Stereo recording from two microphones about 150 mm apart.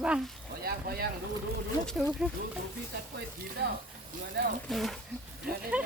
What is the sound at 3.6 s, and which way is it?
Speech, 90° right.